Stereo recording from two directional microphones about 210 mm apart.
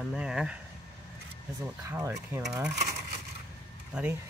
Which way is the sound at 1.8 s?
15° right (ahead or behind).